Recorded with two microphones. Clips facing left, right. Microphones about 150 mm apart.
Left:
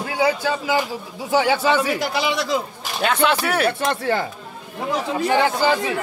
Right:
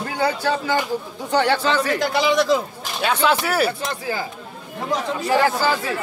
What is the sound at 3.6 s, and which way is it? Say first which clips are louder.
Speech: left 5 dB; 65° left (ahead or behind).